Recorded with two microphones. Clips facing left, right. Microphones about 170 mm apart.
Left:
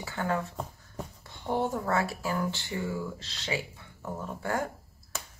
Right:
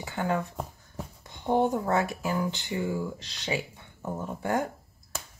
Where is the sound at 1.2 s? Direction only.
15° right (ahead or behind).